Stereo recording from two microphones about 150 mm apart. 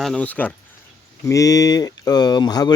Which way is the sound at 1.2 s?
20° left (ahead or behind).